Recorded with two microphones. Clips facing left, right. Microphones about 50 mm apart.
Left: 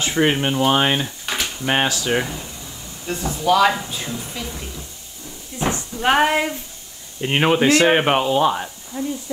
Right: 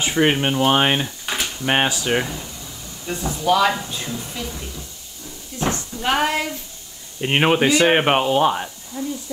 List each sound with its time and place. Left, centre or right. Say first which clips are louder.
0.1 s speech: even; centre
1.0 s a sound: even; centre
1.7 s speech: even; centre
2.1 s a woman's voice: even; centre
5.6 s a sound: left 1 dB; left
7.2 s speech: even; centre
8.9 s speech: left 2 dB; left